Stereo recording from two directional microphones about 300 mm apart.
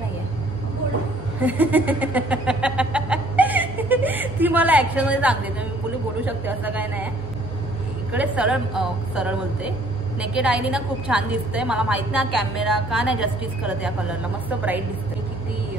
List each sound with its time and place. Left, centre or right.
1.4 s a sound: centre
6.2 s a woman's voice: centre
8.1 s a woman's voice: centre